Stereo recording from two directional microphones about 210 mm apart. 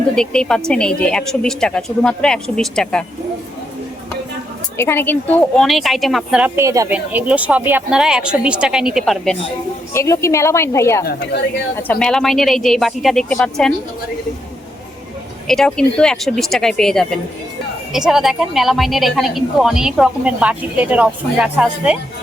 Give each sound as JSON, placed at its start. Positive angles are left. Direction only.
{"t": 0.2, "sound": "a woman's voice", "side_deg": 5}
{"t": 4.8, "sound": "a woman's voice", "side_deg": 10}
{"t": 9.9, "sound": "a woman's voice", "side_deg": 15}
{"t": 11.0, "sound": "a woman's voice", "side_deg": 50}
{"t": 11.8, "sound": "a woman's voice", "side_deg": 5}
{"t": 15.4, "sound": "a woman's voice", "side_deg": 0}